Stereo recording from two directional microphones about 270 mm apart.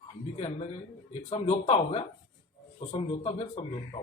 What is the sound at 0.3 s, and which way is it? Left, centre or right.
A man's voice, left.